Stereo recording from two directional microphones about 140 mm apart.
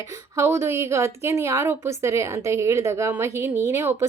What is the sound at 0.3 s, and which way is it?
A woman's voice, 20° right (ahead or behind).